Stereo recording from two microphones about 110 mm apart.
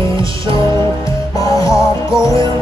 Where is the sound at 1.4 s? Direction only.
30° left (ahead or behind).